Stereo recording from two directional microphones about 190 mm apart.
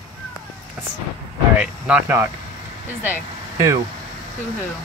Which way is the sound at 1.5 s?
5° right (ahead or behind).